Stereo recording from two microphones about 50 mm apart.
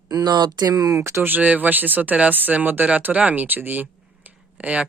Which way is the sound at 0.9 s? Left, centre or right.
Right.